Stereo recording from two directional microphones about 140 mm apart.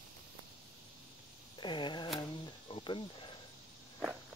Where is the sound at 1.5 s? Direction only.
35° left (ahead or behind).